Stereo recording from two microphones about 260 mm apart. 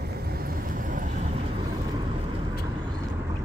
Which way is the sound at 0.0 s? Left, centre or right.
Right.